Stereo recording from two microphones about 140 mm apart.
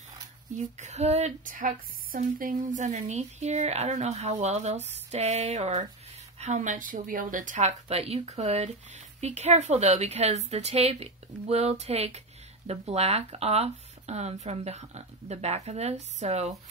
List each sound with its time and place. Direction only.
0.7 s speech: 55° right (ahead or behind)
2.1 s speech: 85° right; by 16.5 s 55° right (ahead or behind)